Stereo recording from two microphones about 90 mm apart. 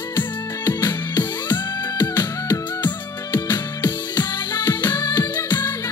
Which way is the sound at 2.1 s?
20° left (ahead or behind).